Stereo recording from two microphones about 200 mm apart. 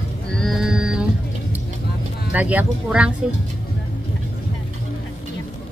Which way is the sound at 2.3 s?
5° right (ahead or behind).